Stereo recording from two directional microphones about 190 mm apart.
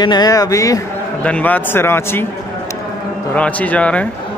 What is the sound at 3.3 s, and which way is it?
Speech, 5° left (ahead or behind).